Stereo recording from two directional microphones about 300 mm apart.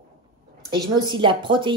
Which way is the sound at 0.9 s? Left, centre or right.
Centre.